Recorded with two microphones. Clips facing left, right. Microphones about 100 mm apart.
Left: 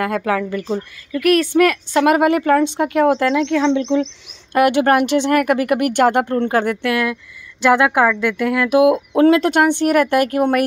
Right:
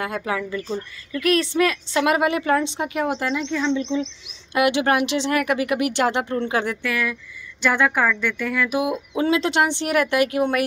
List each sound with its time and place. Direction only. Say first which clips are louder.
0.0 s a woman's voice: left 6 dB; 60° left (ahead or behind)
2.8 s a woman's voice: left 9 dB; 75° left (ahead or behind)
4.6 s speech: left 5 dB; 45° left (ahead or behind); by 7.2 s 70° left (ahead or behind)
7.7 s speech: left 6 dB; 85° left; by 10.6 s 50° left (ahead or behind)